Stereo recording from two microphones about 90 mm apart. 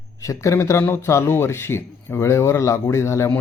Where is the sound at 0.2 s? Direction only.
40° left (ahead or behind).